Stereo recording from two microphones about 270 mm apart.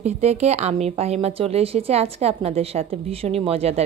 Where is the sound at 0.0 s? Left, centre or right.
Right.